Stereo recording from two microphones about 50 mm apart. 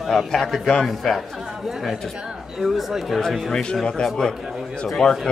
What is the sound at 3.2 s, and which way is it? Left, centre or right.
A man's voice, centre.